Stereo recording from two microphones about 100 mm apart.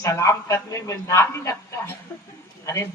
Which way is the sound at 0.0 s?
30° left (ahead or behind).